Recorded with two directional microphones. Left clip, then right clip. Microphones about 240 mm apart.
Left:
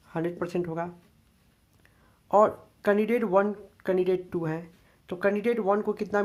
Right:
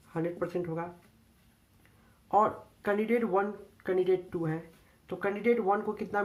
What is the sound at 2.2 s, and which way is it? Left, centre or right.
Speech, left.